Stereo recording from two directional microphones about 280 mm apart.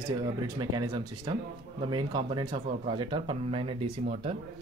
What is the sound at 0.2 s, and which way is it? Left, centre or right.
Speech, centre.